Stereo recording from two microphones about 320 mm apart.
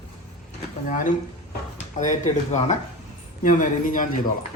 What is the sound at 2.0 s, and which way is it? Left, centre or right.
Speech, left.